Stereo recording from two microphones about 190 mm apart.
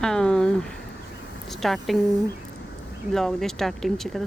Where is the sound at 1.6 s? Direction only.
Centre (ahead or behind).